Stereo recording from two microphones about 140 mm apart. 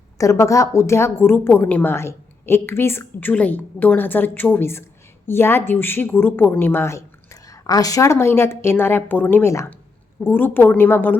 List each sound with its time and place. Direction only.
0.2 s a woman's voice: 20° left (ahead or behind)